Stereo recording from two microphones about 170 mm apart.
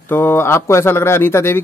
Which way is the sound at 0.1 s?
15° left (ahead or behind).